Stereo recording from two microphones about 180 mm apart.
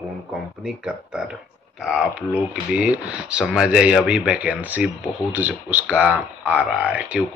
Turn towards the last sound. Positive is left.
turn(degrees=-5)  # may be behind; listen again after turning